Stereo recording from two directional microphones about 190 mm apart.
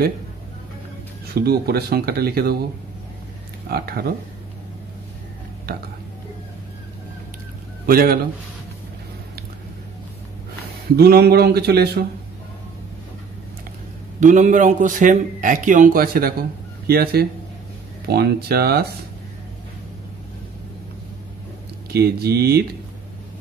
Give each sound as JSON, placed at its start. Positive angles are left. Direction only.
{"t": 1.3, "sound": "speech", "side_deg": -55}
{"t": 3.7, "sound": "a man's voice", "side_deg": -55}
{"t": 7.8, "sound": "a man's voice", "side_deg": -50}
{"t": 11.0, "sound": "speech", "side_deg": -55}
{"t": 14.2, "sound": "a man's voice", "side_deg": -40}
{"t": 21.9, "sound": "speech", "side_deg": -55}